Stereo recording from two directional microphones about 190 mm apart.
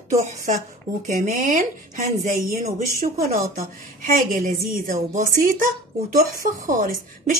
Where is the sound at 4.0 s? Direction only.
45° right (ahead or behind).